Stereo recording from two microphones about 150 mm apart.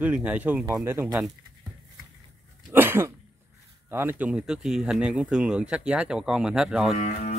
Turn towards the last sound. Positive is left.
turn(degrees=45)  # may be behind; listen again after turning